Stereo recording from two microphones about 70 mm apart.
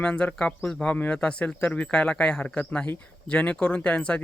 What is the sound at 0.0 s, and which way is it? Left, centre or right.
Speech, centre.